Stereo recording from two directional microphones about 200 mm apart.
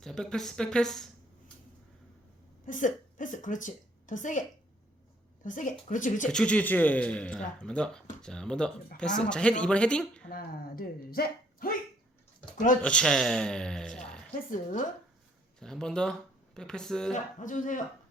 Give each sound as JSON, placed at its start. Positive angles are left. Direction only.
{"t": 0.0, "sound": "a man's voice", "side_deg": 5}
{"t": 2.6, "sound": "a woman's voice", "side_deg": 40}
{"t": 6.2, "sound": "a man's voice", "side_deg": 5}
{"t": 10.2, "sound": "speech", "side_deg": 45}
{"t": 12.8, "sound": "a man's voice", "side_deg": 5}
{"t": 14.3, "sound": "speech", "side_deg": 40}
{"t": 15.6, "sound": "a man's voice", "side_deg": 5}
{"t": 17.4, "sound": "speech", "side_deg": 40}